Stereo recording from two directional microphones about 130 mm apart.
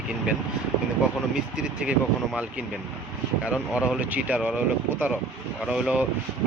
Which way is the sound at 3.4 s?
10° right (ahead or behind).